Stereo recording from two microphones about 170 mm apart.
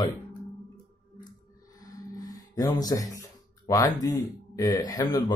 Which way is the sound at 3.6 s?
20° left (ahead or behind).